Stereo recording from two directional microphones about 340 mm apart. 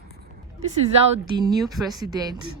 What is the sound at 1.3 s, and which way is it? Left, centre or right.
Speech, centre.